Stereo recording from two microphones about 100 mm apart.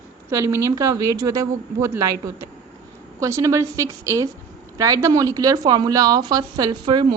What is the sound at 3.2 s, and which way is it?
Speech, 30° right (ahead or behind).